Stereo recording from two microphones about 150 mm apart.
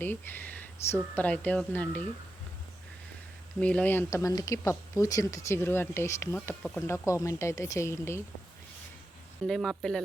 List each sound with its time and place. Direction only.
0.0 s speech: 15° left (ahead or behind)
3.6 s speech: 10° left (ahead or behind)
6.7 s speech: 15° left (ahead or behind)
9.5 s speech: centre (ahead or behind)